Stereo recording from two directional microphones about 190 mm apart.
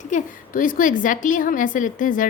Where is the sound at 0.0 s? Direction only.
45° left (ahead or behind).